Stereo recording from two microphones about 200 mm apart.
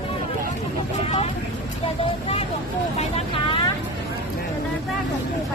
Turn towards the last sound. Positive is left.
turn(degrees=30)  # may be behind; listen again after turning